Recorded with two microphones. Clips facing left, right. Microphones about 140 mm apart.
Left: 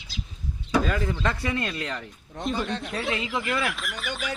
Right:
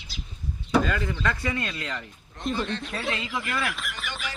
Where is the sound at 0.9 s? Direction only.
5° left (ahead or behind).